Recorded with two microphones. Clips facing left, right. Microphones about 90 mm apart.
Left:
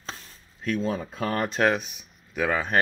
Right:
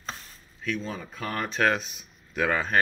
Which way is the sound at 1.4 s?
15° left (ahead or behind).